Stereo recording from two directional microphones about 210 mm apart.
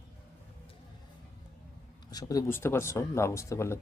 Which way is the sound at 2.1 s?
15° left (ahead or behind).